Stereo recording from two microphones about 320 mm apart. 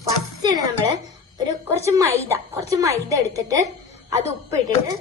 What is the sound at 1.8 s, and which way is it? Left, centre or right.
A woman's voice, centre.